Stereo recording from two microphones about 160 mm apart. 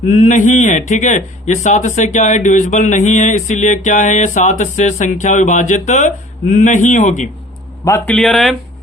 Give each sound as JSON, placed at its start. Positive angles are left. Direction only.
{"t": 0.1, "sound": "a sound", "side_deg": 50}
{"t": 7.9, "sound": "a man's voice", "side_deg": 15}
{"t": 8.1, "sound": "speech", "side_deg": 0}